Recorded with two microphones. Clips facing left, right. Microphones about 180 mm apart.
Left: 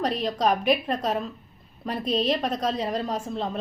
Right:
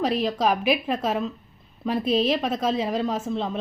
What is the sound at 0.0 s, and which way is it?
A woman's voice, 5° right (ahead or behind).